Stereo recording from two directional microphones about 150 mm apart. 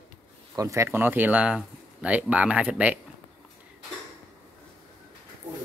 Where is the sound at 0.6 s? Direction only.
20° right (ahead or behind).